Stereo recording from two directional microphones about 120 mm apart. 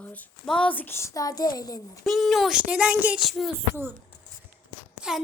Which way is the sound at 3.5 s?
20° right (ahead or behind).